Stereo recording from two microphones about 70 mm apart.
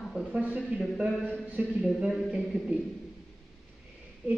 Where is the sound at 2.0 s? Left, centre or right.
Centre.